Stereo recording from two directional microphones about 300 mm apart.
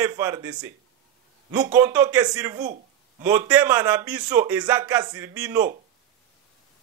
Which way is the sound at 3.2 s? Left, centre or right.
Centre.